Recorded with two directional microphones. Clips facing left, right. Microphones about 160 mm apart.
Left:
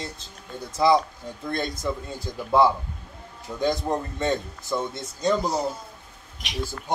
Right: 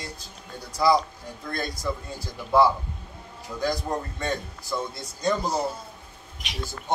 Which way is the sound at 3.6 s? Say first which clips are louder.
Left 3 dB; 20° left (ahead or behind).